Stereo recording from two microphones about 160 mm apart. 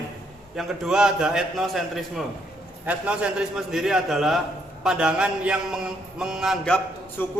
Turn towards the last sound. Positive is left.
turn(degrees=15)  # may be behind; listen again after turning